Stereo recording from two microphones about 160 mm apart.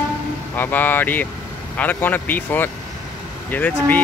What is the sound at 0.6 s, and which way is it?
Speech, 10° left (ahead or behind).